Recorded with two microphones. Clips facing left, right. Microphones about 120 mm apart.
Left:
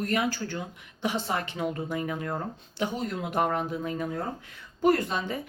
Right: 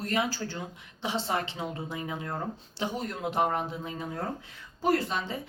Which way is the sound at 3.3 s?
20° right (ahead or behind).